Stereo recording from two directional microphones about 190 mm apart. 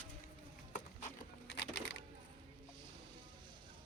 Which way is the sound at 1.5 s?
65° left (ahead or behind).